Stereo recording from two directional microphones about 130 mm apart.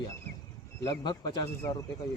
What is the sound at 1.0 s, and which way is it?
Speech, 35° left (ahead or behind).